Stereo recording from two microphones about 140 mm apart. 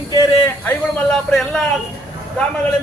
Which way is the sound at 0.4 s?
15° left (ahead or behind).